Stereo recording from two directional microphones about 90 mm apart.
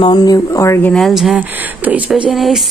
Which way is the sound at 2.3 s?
Centre (ahead or behind).